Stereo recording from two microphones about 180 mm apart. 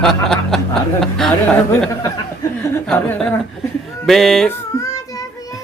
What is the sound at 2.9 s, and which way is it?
Speech, 5° left (ahead or behind).